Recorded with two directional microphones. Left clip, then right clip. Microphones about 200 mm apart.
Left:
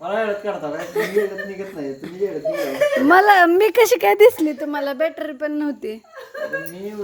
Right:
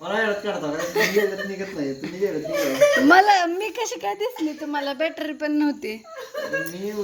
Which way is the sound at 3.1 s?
35° left (ahead or behind).